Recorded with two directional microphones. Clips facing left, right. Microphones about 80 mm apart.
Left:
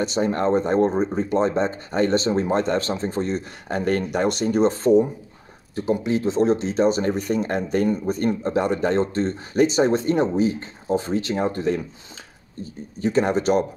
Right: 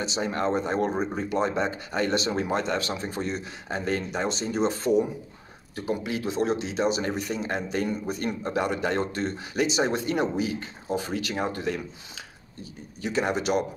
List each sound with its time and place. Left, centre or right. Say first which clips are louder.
0.0 s speech: left 6 dB; left
3.6 s speech: left 6 dB; left
4.6 s speech: left 5 dB; left
13.0 s speech: left 6 dB; left